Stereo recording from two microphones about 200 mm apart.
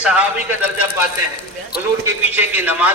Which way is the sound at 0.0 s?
5° right (ahead or behind).